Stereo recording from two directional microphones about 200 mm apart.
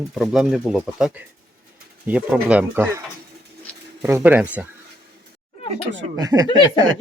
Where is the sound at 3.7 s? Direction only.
5° left (ahead or behind).